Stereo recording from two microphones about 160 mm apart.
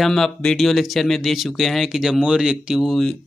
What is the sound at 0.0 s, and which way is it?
Speech, 5° left (ahead or behind).